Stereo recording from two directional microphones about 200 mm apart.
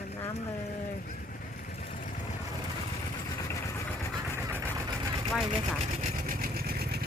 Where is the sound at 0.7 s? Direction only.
45° left (ahead or behind).